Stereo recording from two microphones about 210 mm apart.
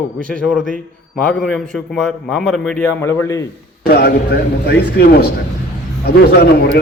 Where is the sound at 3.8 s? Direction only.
50° left (ahead or behind).